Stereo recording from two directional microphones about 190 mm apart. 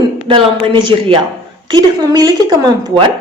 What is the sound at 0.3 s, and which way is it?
Speech, 25° right (ahead or behind).